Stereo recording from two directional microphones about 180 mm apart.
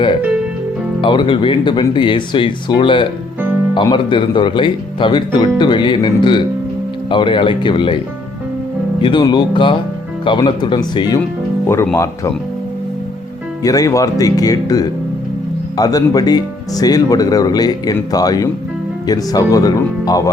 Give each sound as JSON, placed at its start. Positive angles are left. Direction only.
{"t": 1.0, "sound": "speech", "side_deg": 25}
{"t": 9.0, "sound": "speech", "side_deg": 25}
{"t": 13.6, "sound": "speech", "side_deg": 20}